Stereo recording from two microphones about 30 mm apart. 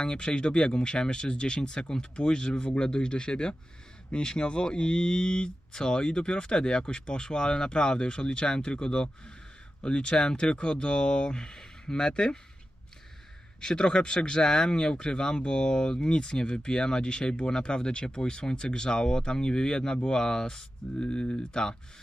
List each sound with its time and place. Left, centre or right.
0.0 s speech: left
13.6 s speech: left
21.0 s speech: left
21.5 s speech: left